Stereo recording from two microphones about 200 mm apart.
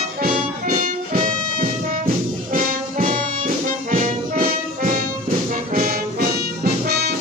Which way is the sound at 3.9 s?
45° right (ahead or behind).